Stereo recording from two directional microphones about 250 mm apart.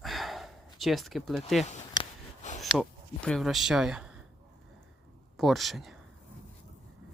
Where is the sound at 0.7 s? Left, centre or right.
Centre.